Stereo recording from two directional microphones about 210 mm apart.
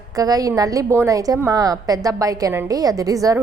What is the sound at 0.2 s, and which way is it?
A woman's voice, 15° right (ahead or behind).